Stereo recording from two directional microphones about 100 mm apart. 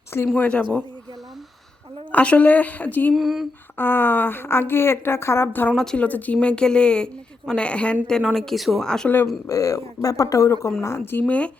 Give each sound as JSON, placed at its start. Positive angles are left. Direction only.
{"t": 0.3, "sound": "speech", "side_deg": 10}
{"t": 2.1, "sound": "speech", "side_deg": 15}
{"t": 3.2, "sound": "speech", "side_deg": 0}
{"t": 3.8, "sound": "a woman's voice", "side_deg": 20}
{"t": 5.7, "sound": "speech", "side_deg": 5}
{"t": 9.2, "sound": "a woman's voice", "side_deg": 35}
{"t": 11.3, "sound": "speech", "side_deg": 15}